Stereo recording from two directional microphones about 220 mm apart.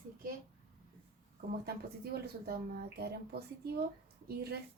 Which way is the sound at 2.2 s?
45° right (ahead or behind).